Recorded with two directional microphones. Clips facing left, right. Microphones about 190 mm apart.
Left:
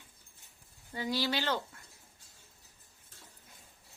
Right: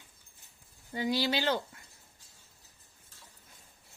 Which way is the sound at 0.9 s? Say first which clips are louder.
Right 3 dB; 15° right (ahead or behind).